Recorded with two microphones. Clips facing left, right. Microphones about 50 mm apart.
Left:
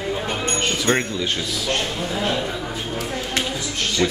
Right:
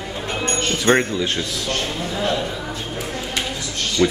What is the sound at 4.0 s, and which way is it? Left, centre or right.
Speech, left.